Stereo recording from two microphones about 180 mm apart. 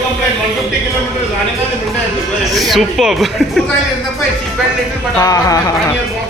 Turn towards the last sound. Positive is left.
turn(degrees=20)  # may be behind; listen again after turning